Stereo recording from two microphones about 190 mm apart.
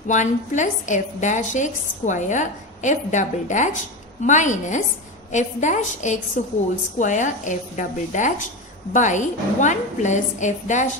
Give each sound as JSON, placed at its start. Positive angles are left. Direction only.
{"t": 0.1, "sound": "a woman's voice", "side_deg": 40}